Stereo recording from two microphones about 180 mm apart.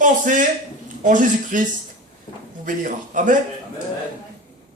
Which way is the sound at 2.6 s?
50° right (ahead or behind).